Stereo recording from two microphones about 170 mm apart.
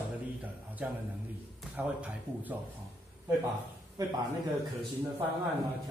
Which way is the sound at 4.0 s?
20° right (ahead or behind).